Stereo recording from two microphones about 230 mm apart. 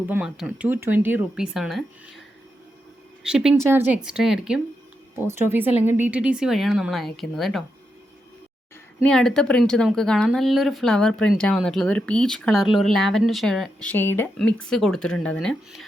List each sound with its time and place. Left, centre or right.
0.1 s speech: centre
3.2 s speech: centre
9.0 s speech: centre